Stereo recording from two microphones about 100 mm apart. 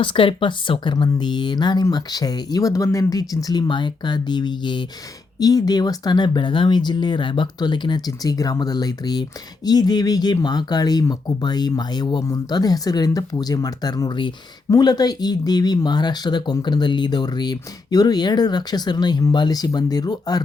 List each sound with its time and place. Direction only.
0.0 s speech: 60° left (ahead or behind); by 20.4 s 40° left (ahead or behind)